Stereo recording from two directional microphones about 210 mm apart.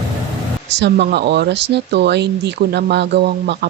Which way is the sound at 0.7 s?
55° right (ahead or behind).